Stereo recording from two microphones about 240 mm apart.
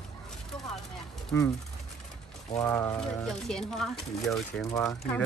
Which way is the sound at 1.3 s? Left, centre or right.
Centre.